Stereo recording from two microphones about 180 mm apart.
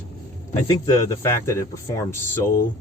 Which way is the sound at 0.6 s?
20° left (ahead or behind).